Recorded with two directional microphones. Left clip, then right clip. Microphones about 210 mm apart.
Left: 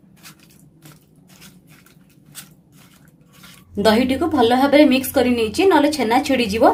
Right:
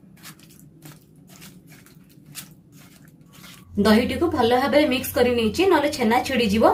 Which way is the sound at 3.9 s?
50° left (ahead or behind).